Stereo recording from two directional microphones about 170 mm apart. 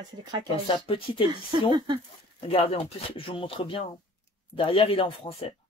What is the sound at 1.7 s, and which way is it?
Speech, 25° right (ahead or behind).